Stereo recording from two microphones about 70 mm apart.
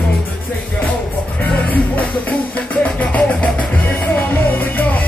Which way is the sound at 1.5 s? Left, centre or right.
Left.